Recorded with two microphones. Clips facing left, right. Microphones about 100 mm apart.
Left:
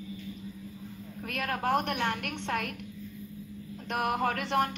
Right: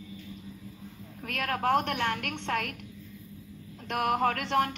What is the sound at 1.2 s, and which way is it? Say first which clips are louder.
Speech: right 2 dB; 15° left (ahead or behind).